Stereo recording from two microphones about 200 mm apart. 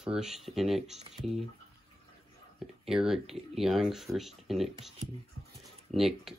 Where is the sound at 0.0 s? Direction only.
5° right (ahead or behind).